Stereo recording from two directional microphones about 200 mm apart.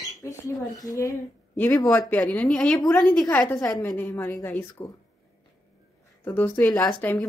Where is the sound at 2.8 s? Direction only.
15° left (ahead or behind).